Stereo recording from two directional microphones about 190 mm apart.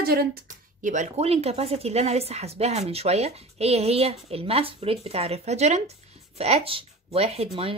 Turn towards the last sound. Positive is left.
turn(degrees=-30)  # may be behind; listen again after turning